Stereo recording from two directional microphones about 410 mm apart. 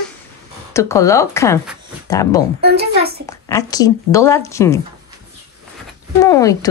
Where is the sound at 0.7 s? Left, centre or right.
Centre.